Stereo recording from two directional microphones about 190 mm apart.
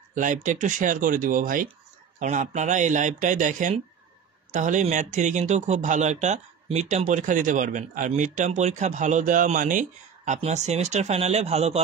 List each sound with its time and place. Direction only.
0.1 s speech: 45° right (ahead or behind)